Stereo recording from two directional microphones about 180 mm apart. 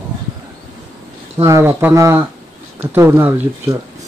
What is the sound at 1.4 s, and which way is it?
Speech, 15° right (ahead or behind).